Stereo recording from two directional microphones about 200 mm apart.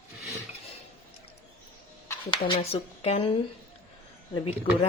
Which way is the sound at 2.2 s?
25° left (ahead or behind).